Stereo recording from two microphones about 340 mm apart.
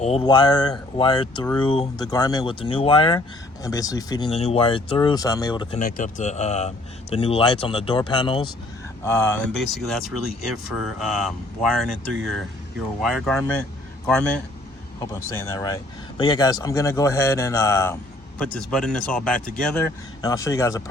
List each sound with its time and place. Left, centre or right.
0.0 s a man's voice: centre
13.0 s a man's voice: centre